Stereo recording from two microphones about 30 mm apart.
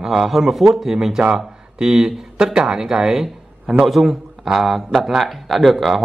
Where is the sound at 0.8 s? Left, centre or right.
Centre.